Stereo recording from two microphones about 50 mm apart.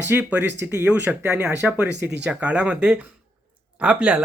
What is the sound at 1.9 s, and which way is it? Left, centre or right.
Speech, right.